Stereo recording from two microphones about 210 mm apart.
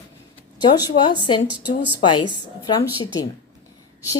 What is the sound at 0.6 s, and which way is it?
Speech, 20° left (ahead or behind).